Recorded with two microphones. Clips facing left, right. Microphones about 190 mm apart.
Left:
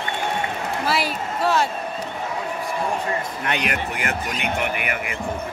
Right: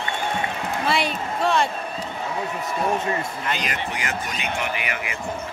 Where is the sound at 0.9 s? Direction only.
5° left (ahead or behind).